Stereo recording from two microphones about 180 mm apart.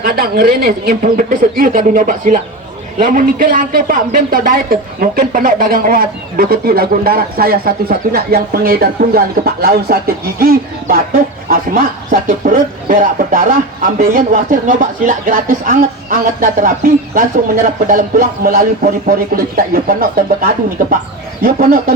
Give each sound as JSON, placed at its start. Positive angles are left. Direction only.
{"t": 0.0, "sound": "speech", "side_deg": -55}